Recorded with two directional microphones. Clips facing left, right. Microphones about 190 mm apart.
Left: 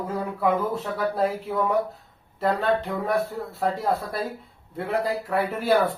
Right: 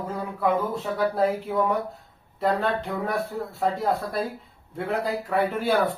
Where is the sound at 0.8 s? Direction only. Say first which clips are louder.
Right 5 dB; centre (ahead or behind).